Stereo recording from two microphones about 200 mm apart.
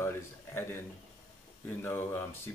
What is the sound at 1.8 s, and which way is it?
Speech, 10° left (ahead or behind).